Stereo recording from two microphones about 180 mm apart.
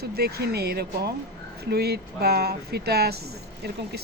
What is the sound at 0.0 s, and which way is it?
Speech, 60° right (ahead or behind).